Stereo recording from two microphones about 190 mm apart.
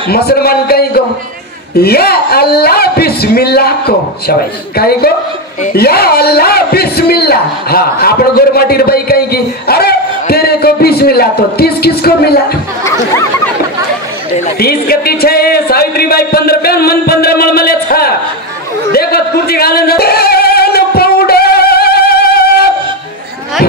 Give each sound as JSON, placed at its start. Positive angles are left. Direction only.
{"t": 0.1, "sound": "speech", "side_deg": 55}
{"t": 5.6, "sound": "a sound", "side_deg": 50}
{"t": 14.6, "sound": "speech", "side_deg": 55}
{"t": 18.9, "sound": "singing", "side_deg": 55}